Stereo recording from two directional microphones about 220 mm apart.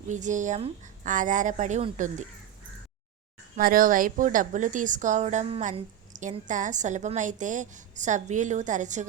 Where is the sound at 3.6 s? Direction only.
40° right (ahead or behind).